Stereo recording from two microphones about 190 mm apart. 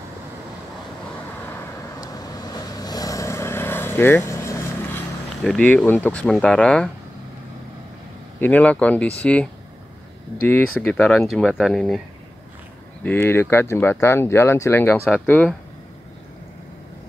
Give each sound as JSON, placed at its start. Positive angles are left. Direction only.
{"t": 2.0, "sound": "vehicle", "side_deg": 20}
{"t": 5.4, "sound": "speech", "side_deg": 5}
{"t": 8.4, "sound": "speech", "side_deg": 10}
{"t": 10.8, "sound": "speech", "side_deg": 5}
{"t": 13.0, "sound": "speech", "side_deg": 10}